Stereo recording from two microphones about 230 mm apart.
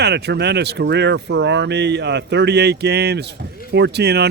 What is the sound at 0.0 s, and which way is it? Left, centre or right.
Speech, right.